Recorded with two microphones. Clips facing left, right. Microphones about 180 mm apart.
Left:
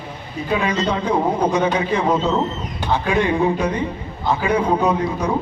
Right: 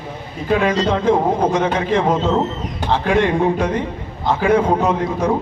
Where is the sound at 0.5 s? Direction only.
50° right (ahead or behind).